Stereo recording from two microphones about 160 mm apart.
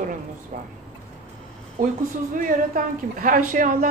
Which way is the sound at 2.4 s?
55° right (ahead or behind).